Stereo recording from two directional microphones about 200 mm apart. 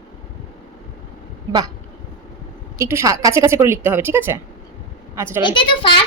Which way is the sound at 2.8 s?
15° right (ahead or behind).